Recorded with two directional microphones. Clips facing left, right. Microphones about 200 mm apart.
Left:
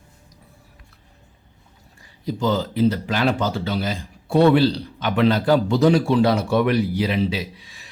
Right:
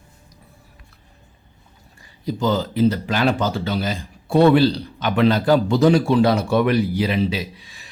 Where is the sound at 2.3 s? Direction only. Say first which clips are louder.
Right 1 dB; 45° right (ahead or behind).